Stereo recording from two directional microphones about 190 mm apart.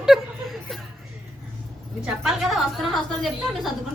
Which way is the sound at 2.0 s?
Centre (ahead or behind).